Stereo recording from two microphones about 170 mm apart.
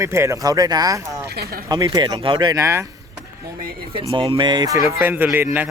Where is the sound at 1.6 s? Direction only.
20° right (ahead or behind).